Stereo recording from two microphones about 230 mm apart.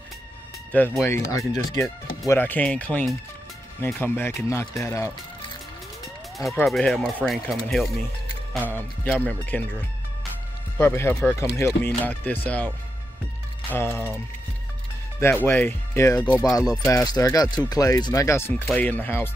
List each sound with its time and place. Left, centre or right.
0.7 s speech: centre
6.6 s speech: centre
10.8 s speech: centre